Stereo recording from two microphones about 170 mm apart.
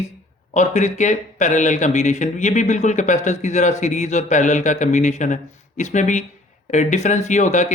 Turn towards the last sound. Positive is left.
turn(degrees=45)  # may be behind; listen again after turning